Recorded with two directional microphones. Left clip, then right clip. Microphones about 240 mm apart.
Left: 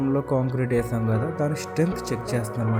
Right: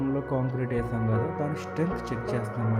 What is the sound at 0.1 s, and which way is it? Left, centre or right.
Speech, centre.